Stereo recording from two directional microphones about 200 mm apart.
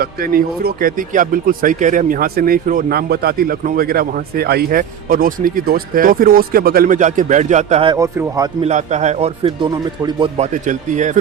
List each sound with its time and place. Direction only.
0.0 s speech: 45° right (ahead or behind); by 7.9 s 30° right (ahead or behind)
7.9 s speech: 15° right (ahead or behind)
8.6 s speech: 35° right (ahead or behind)